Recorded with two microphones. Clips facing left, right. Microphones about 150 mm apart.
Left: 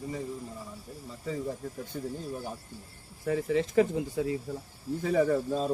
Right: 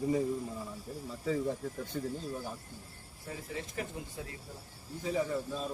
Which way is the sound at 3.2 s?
90° left.